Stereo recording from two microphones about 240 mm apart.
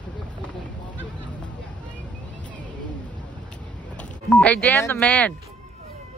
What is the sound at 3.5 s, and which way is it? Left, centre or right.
Vehicle, centre.